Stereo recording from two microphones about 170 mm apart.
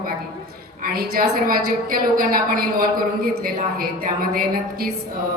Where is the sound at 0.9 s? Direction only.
60° right (ahead or behind).